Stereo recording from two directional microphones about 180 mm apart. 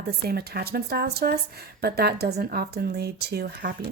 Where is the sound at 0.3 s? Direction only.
60° right (ahead or behind).